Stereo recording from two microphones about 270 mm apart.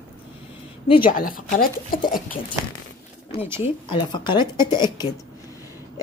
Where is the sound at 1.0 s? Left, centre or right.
Left.